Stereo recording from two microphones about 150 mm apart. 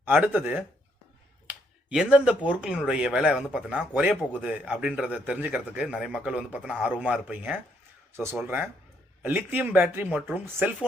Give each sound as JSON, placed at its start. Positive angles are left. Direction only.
{"t": 0.0, "sound": "speech", "side_deg": -10}